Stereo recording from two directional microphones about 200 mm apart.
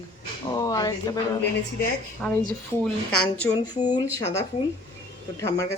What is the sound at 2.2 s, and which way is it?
Speech, 5° left (ahead or behind).